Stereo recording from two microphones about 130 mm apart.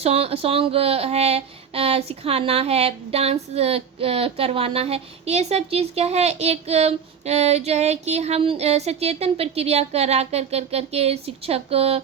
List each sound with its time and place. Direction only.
0.0 s speech: 50° right (ahead or behind)